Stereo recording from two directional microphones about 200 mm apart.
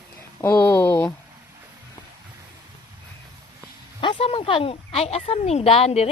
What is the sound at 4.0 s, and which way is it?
A woman's voice, 25° left (ahead or behind).